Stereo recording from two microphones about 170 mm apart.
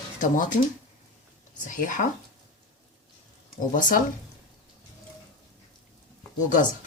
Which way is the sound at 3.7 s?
50° left (ahead or behind).